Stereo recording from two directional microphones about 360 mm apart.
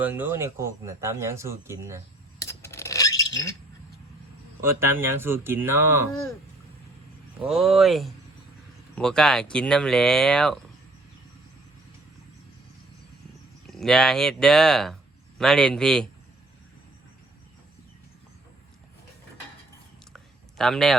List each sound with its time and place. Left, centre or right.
0.0 s speech: centre
2.4 s a sound: centre
4.6 s speech: centre
7.3 s speech: centre
13.7 s speech: centre
20.1 s a sound: centre